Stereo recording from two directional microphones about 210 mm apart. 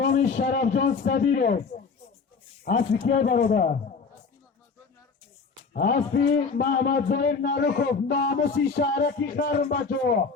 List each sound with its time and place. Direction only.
0.0 s a man's voice: 40° left (ahead or behind)
5.7 s a man's voice: 50° left (ahead or behind)